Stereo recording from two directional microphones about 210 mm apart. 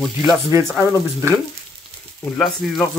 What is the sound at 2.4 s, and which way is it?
Speech, centre (ahead or behind).